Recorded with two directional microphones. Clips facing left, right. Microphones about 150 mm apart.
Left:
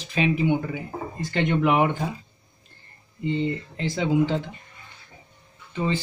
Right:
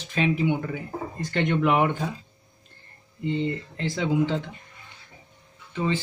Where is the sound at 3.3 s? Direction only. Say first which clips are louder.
Left 1 dB; 15° left (ahead or behind).